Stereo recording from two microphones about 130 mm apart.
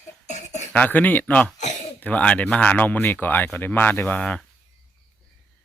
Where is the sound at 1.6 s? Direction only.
65° left (ahead or behind).